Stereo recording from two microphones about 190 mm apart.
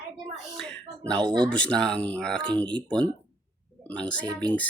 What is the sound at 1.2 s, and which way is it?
Speech, 25° right (ahead or behind).